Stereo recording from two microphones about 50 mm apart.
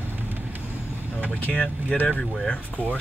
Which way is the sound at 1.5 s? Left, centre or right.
Centre.